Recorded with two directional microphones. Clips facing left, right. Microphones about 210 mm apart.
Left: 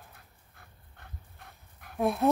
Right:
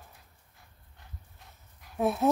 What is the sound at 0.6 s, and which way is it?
Dog, 60° left (ahead or behind).